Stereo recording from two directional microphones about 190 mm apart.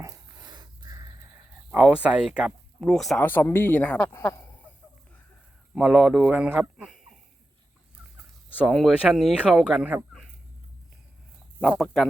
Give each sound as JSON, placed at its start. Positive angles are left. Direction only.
{"t": 0.0, "sound": "a sound", "side_deg": -20}
{"t": 1.7, "sound": "speech", "side_deg": -5}
{"t": 5.7, "sound": "speech", "side_deg": 0}
{"t": 8.5, "sound": "speech", "side_deg": 0}
{"t": 11.6, "sound": "speech", "side_deg": 0}